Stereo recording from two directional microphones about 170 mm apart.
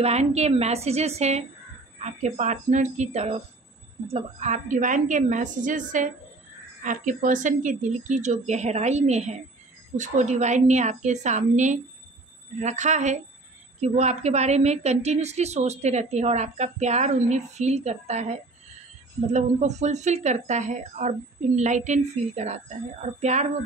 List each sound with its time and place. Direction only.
0.0 s a woman's voice: 40° right (ahead or behind)